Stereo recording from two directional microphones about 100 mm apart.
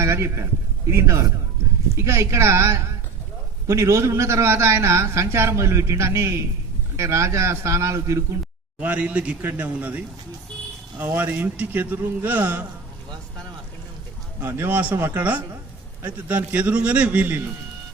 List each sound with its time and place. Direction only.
0.0 s a man's voice: 25° right (ahead or behind)
8.8 s a man's voice: 15° right (ahead or behind)
14.4 s a man's voice: 20° right (ahead or behind)